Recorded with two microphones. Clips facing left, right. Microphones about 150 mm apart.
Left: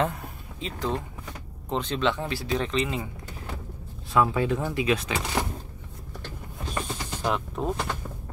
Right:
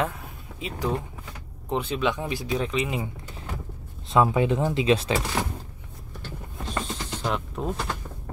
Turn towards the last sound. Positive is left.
turn(degrees=-5)  # may be behind; listen again after turning